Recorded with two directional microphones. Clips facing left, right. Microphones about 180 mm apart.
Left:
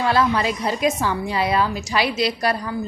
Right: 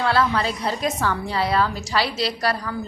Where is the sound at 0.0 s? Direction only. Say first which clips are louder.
Left 2 dB; 15° left (ahead or behind).